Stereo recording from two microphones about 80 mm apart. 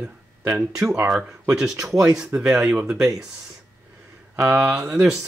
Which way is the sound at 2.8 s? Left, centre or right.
Right.